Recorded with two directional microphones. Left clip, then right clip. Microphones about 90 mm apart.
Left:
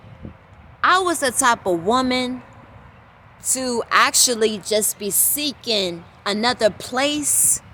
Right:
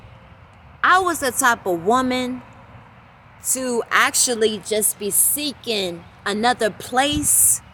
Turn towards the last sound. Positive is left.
turn(degrees=25)  # may be behind; listen again after turning